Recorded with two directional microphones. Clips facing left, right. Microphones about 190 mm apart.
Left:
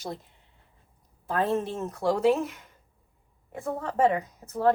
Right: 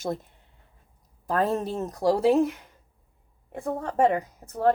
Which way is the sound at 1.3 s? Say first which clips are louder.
Right 1 dB; 40° right (ahead or behind).